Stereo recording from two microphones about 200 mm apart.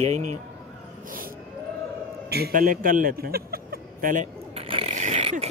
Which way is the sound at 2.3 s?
50° right (ahead or behind).